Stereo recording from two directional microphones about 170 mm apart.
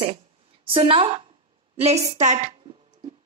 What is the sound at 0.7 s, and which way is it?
A woman's voice, 30° right (ahead or behind).